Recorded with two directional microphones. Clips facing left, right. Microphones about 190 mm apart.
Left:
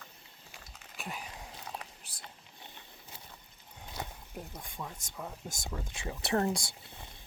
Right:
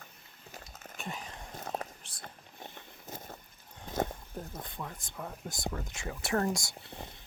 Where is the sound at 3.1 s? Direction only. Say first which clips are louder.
Right 11 dB; 45° right (ahead or behind).